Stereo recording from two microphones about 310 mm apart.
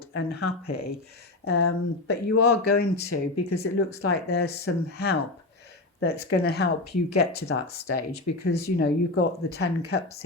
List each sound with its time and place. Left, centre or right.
0.1 s speech: left